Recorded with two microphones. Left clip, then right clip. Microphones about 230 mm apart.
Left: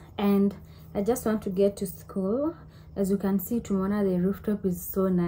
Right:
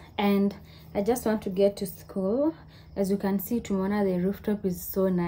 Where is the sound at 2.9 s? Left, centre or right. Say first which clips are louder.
Even; centre.